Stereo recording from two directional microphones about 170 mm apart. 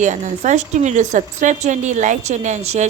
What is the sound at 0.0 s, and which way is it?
A woman's voice, 45° right (ahead or behind).